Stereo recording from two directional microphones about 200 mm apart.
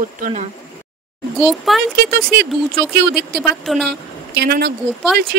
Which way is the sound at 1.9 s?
55° right (ahead or behind).